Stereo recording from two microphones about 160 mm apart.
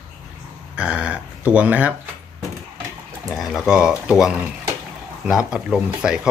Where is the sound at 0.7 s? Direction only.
5° right (ahead or behind).